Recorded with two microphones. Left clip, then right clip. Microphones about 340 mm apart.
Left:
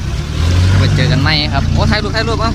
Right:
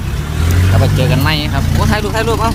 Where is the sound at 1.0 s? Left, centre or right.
Centre.